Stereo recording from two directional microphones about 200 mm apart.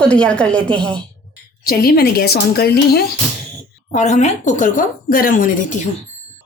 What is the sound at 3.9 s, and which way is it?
Speech, 35° left (ahead or behind).